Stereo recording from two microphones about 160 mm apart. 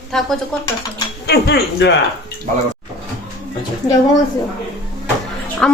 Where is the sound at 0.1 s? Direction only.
Centre (ahead or behind).